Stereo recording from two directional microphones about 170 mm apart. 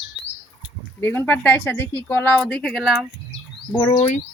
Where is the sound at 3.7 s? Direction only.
20° left (ahead or behind).